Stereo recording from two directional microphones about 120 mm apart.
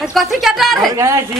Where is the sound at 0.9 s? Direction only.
25° right (ahead or behind).